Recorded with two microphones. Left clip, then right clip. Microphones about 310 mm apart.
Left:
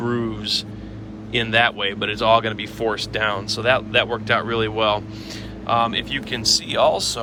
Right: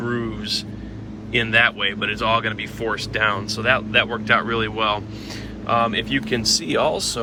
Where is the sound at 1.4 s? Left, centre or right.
Centre.